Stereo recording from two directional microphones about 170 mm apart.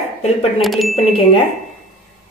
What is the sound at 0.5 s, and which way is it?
Chime, centre (ahead or behind).